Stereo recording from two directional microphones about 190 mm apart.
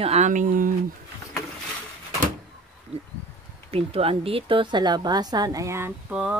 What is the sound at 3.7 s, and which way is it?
A woman's voice, 30° right (ahead or behind).